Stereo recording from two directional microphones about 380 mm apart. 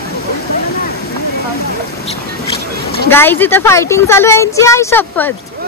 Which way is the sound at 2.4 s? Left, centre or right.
Left.